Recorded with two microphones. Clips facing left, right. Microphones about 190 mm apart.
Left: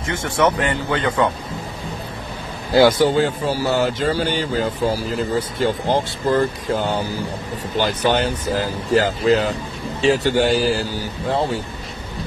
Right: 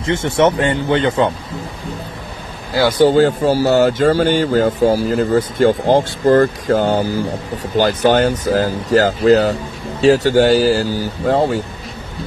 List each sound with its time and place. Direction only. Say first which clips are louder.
0.0 s speech: right 5 dB; 25° right (ahead or behind)
3.1 s speech: right 6 dB; 40° right (ahead or behind)